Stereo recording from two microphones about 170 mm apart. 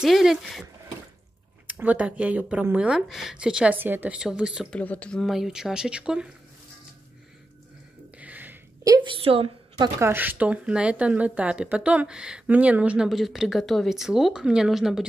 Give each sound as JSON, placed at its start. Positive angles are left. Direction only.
{"t": 0.0, "sound": "speech", "side_deg": 0}
{"t": 1.7, "sound": "speech", "side_deg": -10}
{"t": 4.7, "sound": "speech", "side_deg": 10}
{"t": 8.2, "sound": "a sound", "side_deg": -10}
{"t": 8.8, "sound": "a woman's voice", "side_deg": -25}
{"t": 9.9, "sound": "speech", "side_deg": -15}